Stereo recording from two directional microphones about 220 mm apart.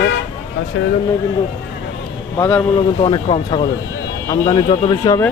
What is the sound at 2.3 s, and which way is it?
Speech, 10° left (ahead or behind).